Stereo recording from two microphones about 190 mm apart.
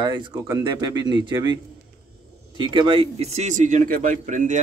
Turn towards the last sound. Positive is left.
turn(degrees=-40)  # may be behind; listen again after turning